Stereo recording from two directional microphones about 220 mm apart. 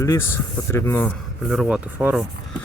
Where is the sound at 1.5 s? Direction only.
5° right (ahead or behind).